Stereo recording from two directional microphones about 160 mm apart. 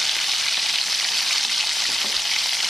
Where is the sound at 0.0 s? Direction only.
Centre (ahead or behind).